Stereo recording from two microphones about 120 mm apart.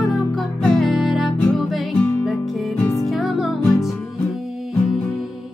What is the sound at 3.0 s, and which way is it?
Music, centre (ahead or behind).